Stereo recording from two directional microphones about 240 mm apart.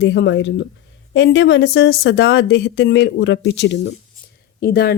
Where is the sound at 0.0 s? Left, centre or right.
Left.